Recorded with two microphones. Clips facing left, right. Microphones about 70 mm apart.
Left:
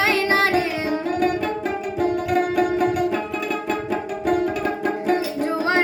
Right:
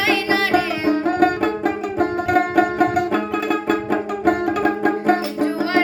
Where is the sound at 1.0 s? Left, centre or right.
Right.